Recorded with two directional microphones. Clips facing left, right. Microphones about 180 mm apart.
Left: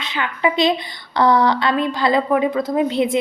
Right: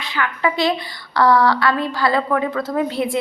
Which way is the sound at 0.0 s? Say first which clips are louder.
Left 1 dB; 20° left (ahead or behind).